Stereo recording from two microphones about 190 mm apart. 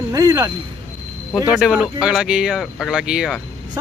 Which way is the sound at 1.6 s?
5° right (ahead or behind).